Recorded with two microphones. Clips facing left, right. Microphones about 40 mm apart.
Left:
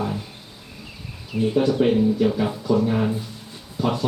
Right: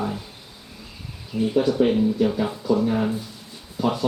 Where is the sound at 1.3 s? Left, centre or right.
Left.